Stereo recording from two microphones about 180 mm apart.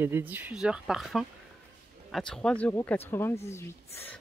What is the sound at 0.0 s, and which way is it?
Speech, 10° right (ahead or behind).